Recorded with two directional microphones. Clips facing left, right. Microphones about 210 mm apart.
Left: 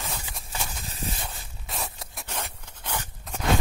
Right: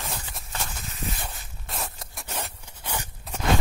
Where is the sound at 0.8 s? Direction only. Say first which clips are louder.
Right 1 dB; 35° left (ahead or behind).